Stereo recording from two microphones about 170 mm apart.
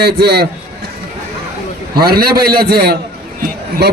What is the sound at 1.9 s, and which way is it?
A man's voice, 65° right (ahead or behind).